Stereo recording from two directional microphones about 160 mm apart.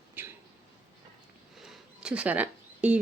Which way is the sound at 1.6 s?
5° right (ahead or behind).